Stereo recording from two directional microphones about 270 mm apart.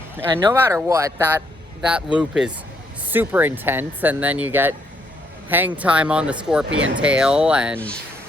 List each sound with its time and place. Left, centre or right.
0.2 s speech: centre
6.7 s speech: right
7.0 s speech: centre